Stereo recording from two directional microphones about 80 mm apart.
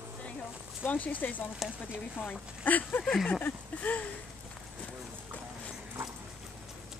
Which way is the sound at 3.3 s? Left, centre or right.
Left.